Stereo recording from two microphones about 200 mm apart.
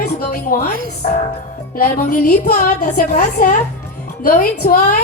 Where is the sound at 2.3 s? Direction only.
40° left (ahead or behind).